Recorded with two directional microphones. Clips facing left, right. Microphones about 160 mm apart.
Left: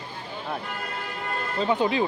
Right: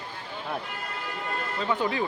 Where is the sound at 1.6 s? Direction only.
20° left (ahead or behind).